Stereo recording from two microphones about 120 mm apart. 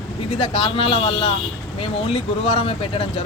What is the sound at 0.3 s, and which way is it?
Speech, 50° left (ahead or behind).